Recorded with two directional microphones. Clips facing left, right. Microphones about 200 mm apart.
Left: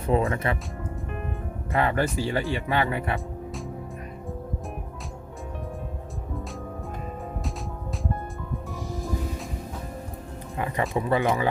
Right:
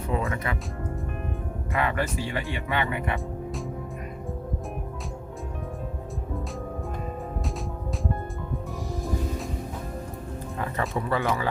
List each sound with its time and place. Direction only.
0.1 s speech: 25° left (ahead or behind)
1.7 s speech: 35° left (ahead or behind)
10.6 s speech: 15° left (ahead or behind)